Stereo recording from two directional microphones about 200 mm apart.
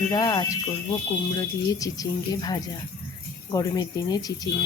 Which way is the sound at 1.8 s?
20° left (ahead or behind).